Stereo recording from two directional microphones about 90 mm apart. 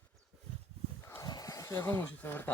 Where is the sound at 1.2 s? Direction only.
45° left (ahead or behind); by 2.5 s 25° left (ahead or behind).